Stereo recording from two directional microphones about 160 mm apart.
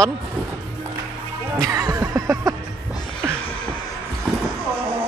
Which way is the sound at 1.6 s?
20° right (ahead or behind).